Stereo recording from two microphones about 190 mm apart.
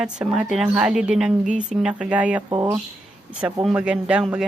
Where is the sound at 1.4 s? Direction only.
40° right (ahead or behind).